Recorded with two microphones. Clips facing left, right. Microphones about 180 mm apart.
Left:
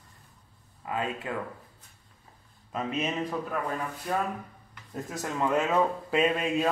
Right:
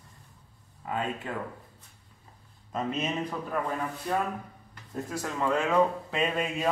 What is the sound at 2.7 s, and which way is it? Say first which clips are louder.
Speech: even; 5° left (ahead or behind).